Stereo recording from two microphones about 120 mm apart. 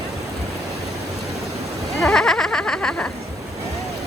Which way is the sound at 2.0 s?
5° left (ahead or behind).